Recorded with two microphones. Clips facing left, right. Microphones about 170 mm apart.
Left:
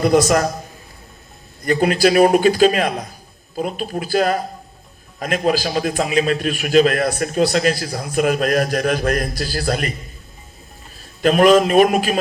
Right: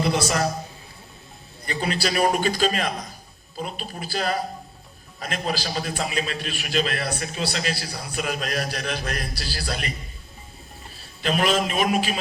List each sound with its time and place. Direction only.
0.0 s a man's voice: 45° left (ahead or behind)
1.6 s a man's voice: 50° left (ahead or behind)
11.0 s a man's voice: 45° left (ahead or behind)